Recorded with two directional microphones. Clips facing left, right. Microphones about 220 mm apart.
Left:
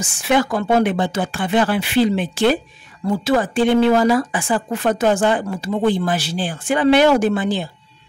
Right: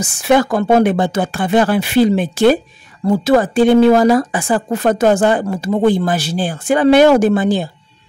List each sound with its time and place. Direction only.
0.0 s a woman's voice: 45° right (ahead or behind)